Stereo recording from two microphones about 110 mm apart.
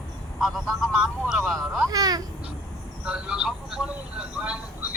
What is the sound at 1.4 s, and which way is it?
Speech, 5° left (ahead or behind).